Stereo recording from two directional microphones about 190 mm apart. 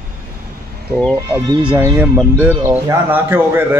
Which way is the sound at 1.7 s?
10° right (ahead or behind).